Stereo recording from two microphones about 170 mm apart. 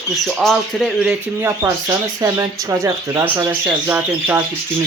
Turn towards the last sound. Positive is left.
turn(degrees=-10)  # may be behind; listen again after turning